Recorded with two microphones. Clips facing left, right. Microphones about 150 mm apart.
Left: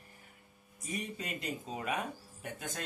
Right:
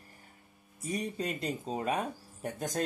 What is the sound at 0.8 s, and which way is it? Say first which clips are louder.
Speech: right 6 dB; 35° right (ahead or behind).